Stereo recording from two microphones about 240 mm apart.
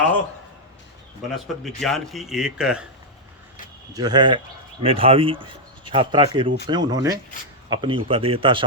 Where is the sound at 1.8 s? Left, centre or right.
Centre.